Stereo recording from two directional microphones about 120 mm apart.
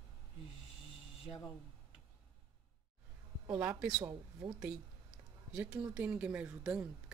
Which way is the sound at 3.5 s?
15° right (ahead or behind).